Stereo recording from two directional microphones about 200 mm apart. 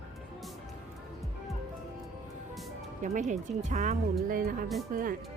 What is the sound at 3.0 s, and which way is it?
Speech, 40° right (ahead or behind).